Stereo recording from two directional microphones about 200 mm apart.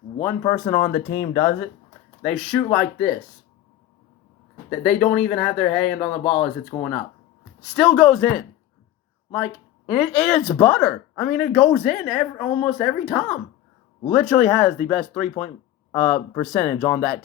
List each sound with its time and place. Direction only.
0.2 s speech: 10° left (ahead or behind)
1.0 s speech: 60° left (ahead or behind)
1.3 s speech: 10° left (ahead or behind)
4.8 s speech: 5° left (ahead or behind)
6.7 s speech: 20° left (ahead or behind)
7.6 s speech: centre (ahead or behind)
10.0 s speech: centre (ahead or behind)